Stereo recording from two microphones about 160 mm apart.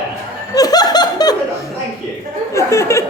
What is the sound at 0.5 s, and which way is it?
Laughter, 25° left (ahead or behind).